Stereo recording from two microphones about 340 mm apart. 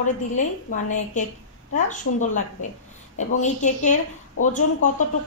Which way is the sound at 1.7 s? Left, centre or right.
Left.